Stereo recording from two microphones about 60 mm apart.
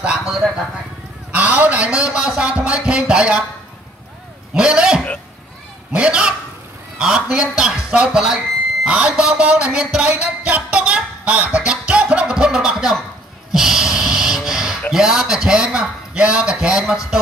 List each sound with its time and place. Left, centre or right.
0.0 s a sound: centre
1.3 s a man's voice: right
4.6 s a man's voice: centre
10.1 s music: right; by 12.9 s centre
13.5 s snort: centre
14.9 s a man's voice: centre